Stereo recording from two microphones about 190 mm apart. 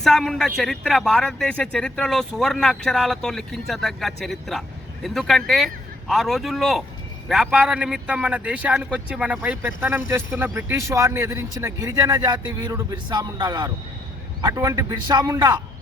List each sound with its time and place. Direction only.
0.0 s a man's voice: centre (ahead or behind); by 15.6 s 20° right (ahead or behind)